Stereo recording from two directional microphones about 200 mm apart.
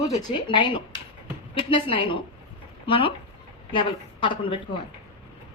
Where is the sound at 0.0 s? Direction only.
20° left (ahead or behind).